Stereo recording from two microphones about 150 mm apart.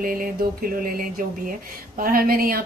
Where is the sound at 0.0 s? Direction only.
70° right (ahead or behind).